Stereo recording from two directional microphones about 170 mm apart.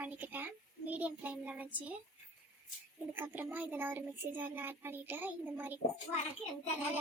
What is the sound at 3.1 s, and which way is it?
Speech, 10° right (ahead or behind).